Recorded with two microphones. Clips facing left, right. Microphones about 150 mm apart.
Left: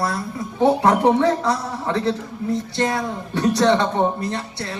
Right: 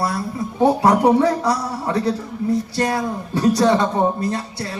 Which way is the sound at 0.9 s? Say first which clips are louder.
Right 1 dB; 25° left (ahead or behind).